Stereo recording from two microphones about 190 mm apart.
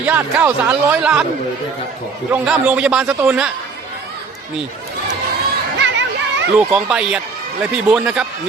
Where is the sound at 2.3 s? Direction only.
5° right (ahead or behind).